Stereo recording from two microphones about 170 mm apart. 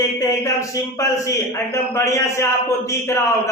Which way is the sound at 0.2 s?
20° left (ahead or behind).